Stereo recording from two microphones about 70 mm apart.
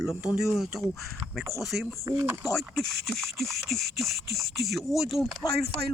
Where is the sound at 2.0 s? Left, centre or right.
Right.